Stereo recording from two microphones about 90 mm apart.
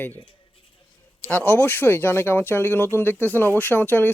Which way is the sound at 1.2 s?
20° left (ahead or behind).